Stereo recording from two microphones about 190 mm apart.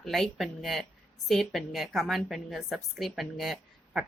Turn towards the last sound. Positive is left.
turn(degrees=0)  # may be behind; listen again after turning